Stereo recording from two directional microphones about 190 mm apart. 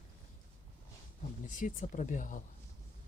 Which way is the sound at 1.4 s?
45° left (ahead or behind).